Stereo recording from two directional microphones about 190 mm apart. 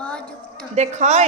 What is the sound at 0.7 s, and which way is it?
Speech, 35° right (ahead or behind).